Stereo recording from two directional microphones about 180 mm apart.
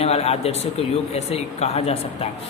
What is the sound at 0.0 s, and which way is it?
A woman's voice, 35° left (ahead or behind).